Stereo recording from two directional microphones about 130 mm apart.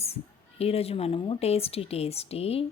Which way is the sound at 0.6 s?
50° left (ahead or behind).